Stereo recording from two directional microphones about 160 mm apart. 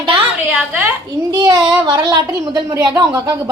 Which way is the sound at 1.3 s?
25° right (ahead or behind).